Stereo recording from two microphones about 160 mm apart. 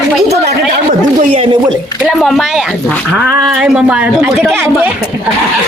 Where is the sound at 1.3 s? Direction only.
35° right (ahead or behind).